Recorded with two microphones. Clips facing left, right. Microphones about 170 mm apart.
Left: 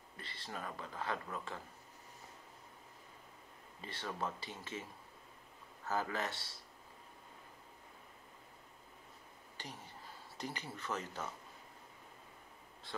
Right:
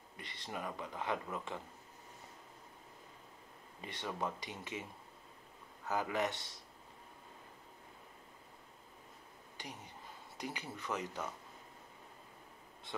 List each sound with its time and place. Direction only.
0.2 s speech: 15° right (ahead or behind)
3.8 s speech: 15° right (ahead or behind)
5.9 s speech: 15° right (ahead or behind)
9.6 s speech: 15° right (ahead or behind)